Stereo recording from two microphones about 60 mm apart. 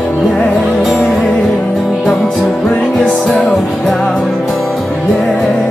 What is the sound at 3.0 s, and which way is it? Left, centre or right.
Music, centre.